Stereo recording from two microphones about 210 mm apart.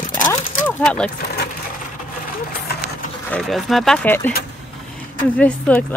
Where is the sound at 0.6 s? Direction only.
5° left (ahead or behind).